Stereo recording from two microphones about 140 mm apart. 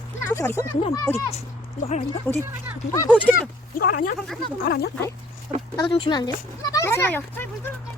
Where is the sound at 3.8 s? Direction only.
85° left.